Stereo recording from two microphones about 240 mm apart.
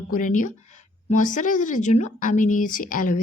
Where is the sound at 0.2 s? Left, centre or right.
Left.